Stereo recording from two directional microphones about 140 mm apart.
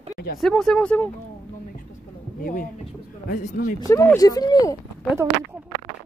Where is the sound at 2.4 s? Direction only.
85° left.